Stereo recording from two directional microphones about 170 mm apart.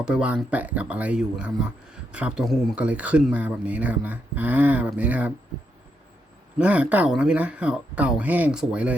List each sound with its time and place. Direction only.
0.0 s speech: 5° right (ahead or behind)
6.6 s speech: 10° right (ahead or behind)